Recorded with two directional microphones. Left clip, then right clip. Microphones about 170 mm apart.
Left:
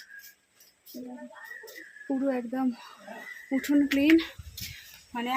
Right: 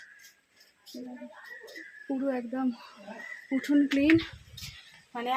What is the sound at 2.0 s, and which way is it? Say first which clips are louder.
Speech: left 2 dB; 10° left (ahead or behind).